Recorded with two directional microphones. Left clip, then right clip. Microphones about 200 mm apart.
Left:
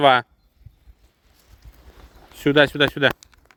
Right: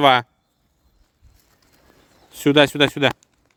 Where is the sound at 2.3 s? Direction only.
25° right (ahead or behind).